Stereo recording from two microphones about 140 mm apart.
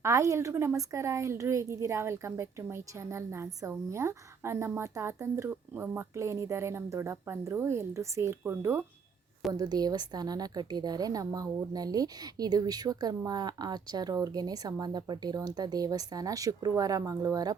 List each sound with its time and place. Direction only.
0.0 s a woman's voice: 20° right (ahead or behind)